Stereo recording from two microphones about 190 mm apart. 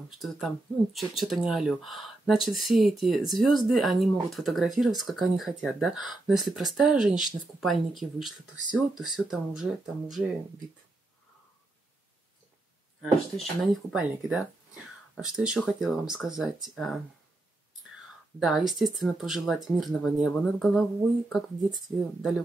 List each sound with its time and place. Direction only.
0.1 s speech: centre (ahead or behind)
13.8 s speech: centre (ahead or behind)
18.4 s speech: centre (ahead or behind)